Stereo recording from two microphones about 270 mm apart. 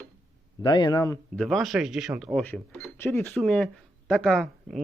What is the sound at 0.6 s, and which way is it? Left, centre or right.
Speech, centre.